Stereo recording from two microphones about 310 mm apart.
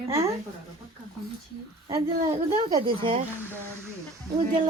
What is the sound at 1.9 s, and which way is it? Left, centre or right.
Speech, centre.